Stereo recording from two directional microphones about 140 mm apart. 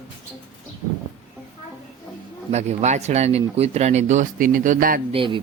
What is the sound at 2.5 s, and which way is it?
Speech, 55° right (ahead or behind).